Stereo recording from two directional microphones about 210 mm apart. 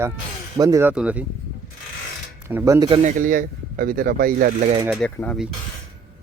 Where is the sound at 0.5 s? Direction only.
15° right (ahead or behind).